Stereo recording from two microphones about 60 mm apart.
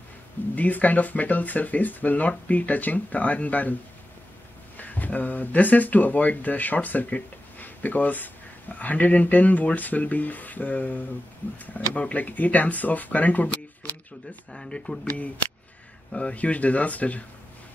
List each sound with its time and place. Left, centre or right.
0.6 s speech: left
4.7 s speech: left
14.5 s speech: centre
15.0 s speech: left